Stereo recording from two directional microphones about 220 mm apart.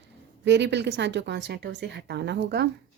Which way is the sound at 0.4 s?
50° right (ahead or behind).